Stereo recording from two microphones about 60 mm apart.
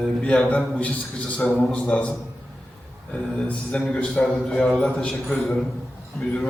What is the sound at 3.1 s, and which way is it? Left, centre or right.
A man's voice, centre.